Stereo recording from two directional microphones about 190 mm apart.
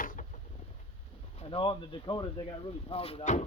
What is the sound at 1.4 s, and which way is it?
Speech, 30° left (ahead or behind).